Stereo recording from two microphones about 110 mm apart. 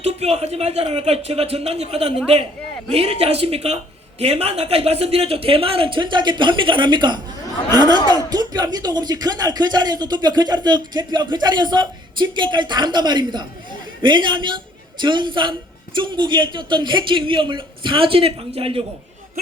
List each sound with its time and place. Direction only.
0.0 s a woman's voice: 75° right (ahead or behind)